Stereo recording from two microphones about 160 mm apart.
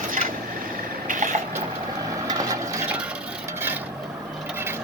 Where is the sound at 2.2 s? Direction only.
20° right (ahead or behind).